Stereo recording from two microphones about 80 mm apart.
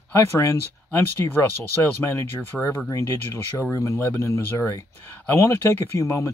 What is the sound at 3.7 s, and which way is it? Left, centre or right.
Speech, left.